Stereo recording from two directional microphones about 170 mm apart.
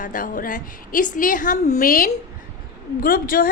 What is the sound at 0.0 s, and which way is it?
A woman's voice, 50° left (ahead or behind).